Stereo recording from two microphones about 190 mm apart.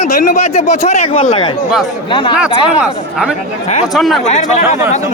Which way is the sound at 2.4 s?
5° right (ahead or behind).